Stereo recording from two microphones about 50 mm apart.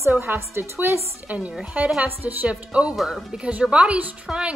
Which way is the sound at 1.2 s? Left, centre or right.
Right.